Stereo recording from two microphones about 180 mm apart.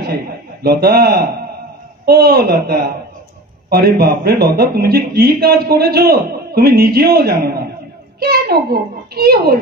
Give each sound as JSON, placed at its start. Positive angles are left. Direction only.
{"t": 0.0, "sound": "a man's voice", "side_deg": -60}